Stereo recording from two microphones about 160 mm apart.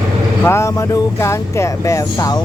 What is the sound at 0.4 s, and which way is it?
Speech, 15° left (ahead or behind).